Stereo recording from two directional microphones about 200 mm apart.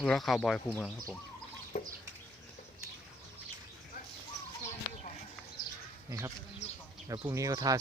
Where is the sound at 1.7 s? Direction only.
45° left (ahead or behind).